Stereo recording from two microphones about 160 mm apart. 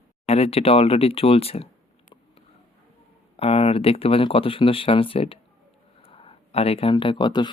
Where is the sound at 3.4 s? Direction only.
40° left (ahead or behind).